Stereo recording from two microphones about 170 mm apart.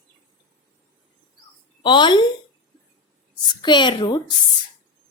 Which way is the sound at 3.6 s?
25° left (ahead or behind).